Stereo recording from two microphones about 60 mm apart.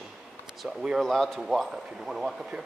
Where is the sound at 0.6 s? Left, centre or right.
Centre.